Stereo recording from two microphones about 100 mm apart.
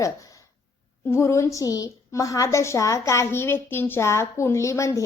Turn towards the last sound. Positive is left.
turn(degrees=30)  # may be behind; listen again after turning